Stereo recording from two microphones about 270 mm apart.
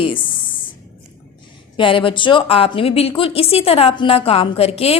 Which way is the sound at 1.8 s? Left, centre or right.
Centre.